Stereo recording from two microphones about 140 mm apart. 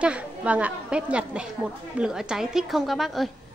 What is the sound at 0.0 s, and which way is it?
A woman's voice, 10° right (ahead or behind).